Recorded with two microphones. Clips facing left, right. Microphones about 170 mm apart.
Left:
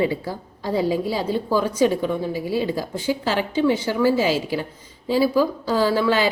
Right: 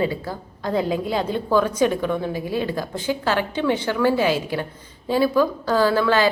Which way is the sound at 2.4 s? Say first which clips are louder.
Left 1 dB; 50° right (ahead or behind).